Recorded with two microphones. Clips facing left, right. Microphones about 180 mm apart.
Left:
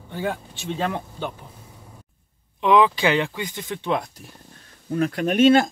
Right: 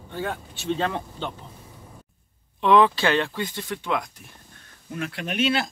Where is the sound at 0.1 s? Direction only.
15° left (ahead or behind).